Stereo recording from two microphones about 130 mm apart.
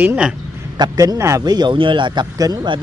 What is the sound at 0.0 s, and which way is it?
Speech, 10° right (ahead or behind).